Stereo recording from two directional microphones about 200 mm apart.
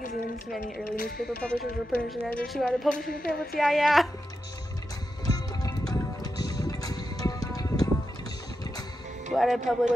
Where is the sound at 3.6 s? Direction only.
Centre (ahead or behind).